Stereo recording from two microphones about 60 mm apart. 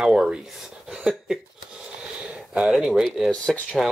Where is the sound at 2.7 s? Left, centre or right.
Centre.